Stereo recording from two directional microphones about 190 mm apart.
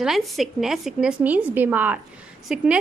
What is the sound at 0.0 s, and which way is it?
A woman's voice, centre (ahead or behind).